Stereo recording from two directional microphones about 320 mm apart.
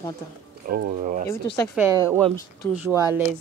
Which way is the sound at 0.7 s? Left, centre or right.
Right.